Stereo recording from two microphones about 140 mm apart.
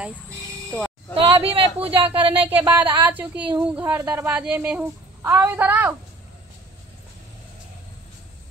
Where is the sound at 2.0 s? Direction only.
40° right (ahead or behind).